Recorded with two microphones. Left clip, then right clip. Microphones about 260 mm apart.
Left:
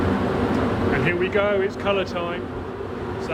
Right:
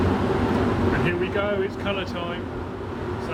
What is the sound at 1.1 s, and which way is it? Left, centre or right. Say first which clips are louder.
Speech: left 4 dB; left.